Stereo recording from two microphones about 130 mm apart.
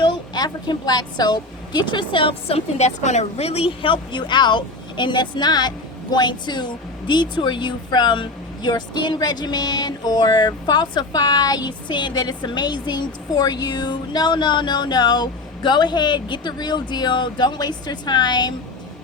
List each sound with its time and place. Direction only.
0.0 s a woman's voice: 35° left (ahead or behind)